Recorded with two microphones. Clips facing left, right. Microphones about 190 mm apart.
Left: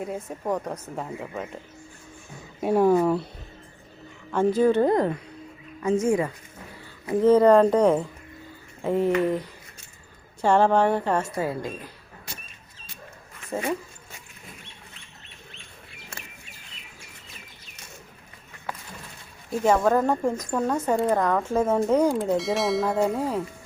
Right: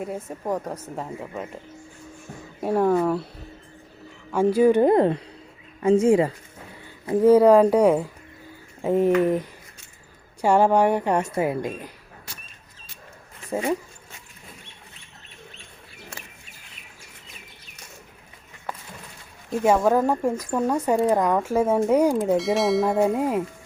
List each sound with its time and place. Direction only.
0.0 s speech: centre (ahead or behind)
2.6 s speech: centre (ahead or behind)
4.3 s a woman's voice: 10° right (ahead or behind)
4.9 s speech: 25° right (ahead or behind)
7.2 s a woman's voice: 10° right (ahead or behind)
13.5 s speech: 15° right (ahead or behind)
19.6 s a woman's voice: 10° right (ahead or behind)
22.4 s speech: centre (ahead or behind)
23.1 s a woman's voice: 15° right (ahead or behind)